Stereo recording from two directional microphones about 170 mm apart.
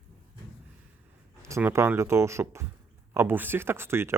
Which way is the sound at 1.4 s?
15° right (ahead or behind).